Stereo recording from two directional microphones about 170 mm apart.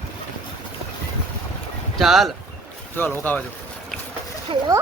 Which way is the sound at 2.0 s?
Centre (ahead or behind).